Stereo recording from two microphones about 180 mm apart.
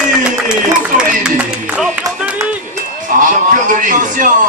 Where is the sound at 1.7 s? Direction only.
5° right (ahead or behind).